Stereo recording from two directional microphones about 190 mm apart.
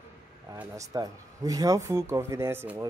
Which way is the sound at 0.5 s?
15° right (ahead or behind).